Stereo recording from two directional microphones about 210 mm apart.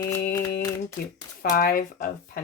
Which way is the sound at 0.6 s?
15° left (ahead or behind).